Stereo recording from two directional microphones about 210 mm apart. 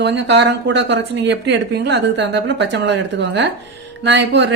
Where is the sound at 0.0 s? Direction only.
55° right (ahead or behind).